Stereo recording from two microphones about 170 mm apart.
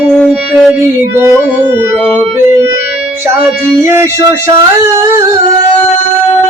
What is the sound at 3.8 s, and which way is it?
Music, 15° right (ahead or behind).